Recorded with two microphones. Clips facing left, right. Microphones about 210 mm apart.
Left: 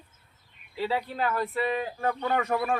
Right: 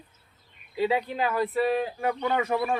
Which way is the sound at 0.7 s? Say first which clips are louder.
Right 4 dB; 15° right (ahead or behind).